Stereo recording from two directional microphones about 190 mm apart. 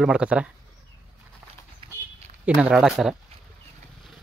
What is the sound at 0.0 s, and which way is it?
Speech, 5° right (ahead or behind).